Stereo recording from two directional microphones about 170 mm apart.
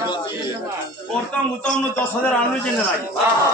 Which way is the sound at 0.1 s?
30° left (ahead or behind).